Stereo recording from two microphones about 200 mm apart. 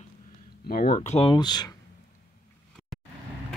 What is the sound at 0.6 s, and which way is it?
Speech, 45° left (ahead or behind).